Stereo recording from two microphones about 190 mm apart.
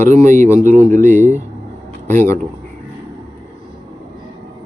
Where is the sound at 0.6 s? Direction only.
10° left (ahead or behind).